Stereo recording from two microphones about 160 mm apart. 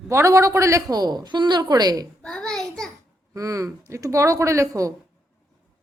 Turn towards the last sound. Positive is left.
turn(degrees=-20)  # may be behind; listen again after turning